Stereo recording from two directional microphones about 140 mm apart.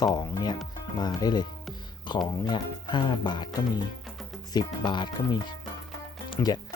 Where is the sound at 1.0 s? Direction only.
30° left (ahead or behind).